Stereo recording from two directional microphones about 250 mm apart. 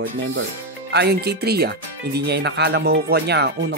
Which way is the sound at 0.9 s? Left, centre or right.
Right.